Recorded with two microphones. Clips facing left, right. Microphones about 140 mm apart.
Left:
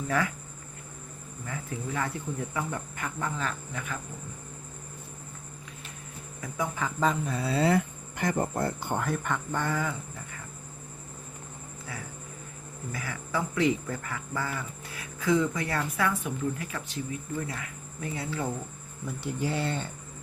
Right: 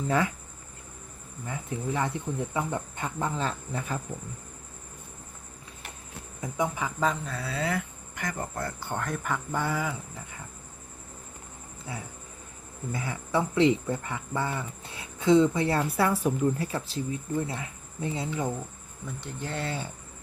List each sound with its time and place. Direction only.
0.1 s speech: 20° right (ahead or behind)
1.5 s speech: 20° right (ahead or behind)
6.4 s speech: 20° right (ahead or behind)
6.8 s speech: centre (ahead or behind)
7.3 s speech: 20° left (ahead or behind)
9.0 s speech: centre (ahead or behind)
12.9 s speech: 25° right (ahead or behind)
19.0 s speech: 10° left (ahead or behind)